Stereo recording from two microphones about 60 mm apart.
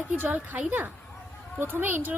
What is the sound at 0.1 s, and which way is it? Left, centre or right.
A woman's voice, right.